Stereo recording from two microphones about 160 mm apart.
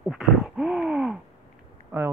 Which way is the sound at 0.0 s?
Centre (ahead or behind).